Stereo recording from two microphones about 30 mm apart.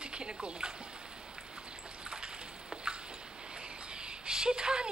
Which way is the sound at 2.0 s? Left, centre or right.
Right.